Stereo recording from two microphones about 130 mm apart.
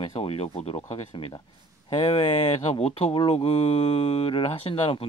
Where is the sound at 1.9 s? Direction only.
40° left (ahead or behind).